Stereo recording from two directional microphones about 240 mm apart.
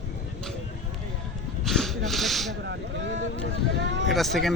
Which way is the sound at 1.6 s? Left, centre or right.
Centre.